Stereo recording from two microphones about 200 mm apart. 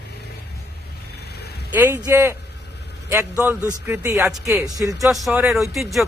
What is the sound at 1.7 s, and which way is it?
A man's voice, 10° right (ahead or behind).